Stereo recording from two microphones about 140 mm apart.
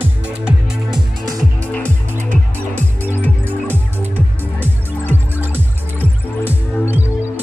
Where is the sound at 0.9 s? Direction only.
25° right (ahead or behind).